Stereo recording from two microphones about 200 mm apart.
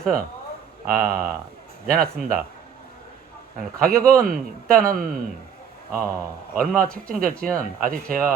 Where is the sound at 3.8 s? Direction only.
45° right (ahead or behind).